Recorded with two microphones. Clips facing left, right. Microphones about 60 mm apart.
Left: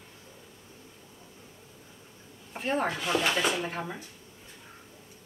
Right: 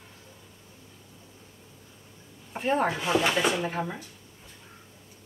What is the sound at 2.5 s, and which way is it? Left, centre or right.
Speech, centre.